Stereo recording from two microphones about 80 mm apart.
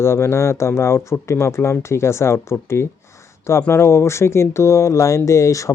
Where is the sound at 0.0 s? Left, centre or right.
Left.